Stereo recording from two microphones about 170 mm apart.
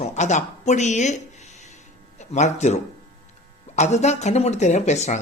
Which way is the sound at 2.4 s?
45° left (ahead or behind).